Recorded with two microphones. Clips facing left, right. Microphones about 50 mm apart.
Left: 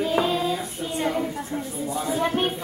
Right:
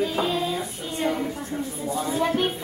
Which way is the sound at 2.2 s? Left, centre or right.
Centre.